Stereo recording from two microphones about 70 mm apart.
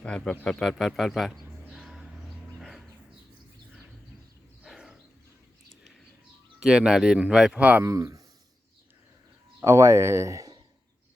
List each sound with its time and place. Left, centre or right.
0.0 s speech: centre
0.6 s a sound: centre
2.6 s dog: centre
4.6 s a sound: centre
6.6 s speech: centre
7.6 s speech: right
7.9 s speech: right
9.6 s speech: right